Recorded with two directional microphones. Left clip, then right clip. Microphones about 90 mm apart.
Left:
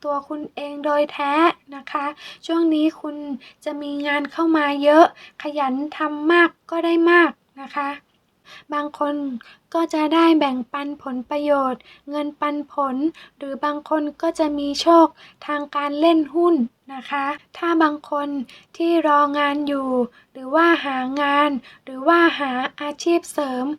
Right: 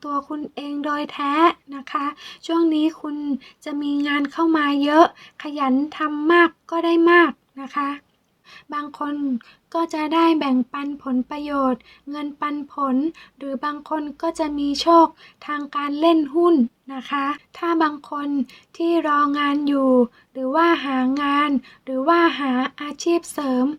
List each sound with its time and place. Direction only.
0.0 s speech: 20° left (ahead or behind)
8.7 s a woman's voice: 35° left (ahead or behind); by 17.4 s 15° left (ahead or behind)
17.5 s speech: 30° left (ahead or behind)